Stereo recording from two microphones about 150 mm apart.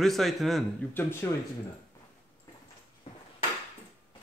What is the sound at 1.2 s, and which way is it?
Speech, 15° left (ahead or behind).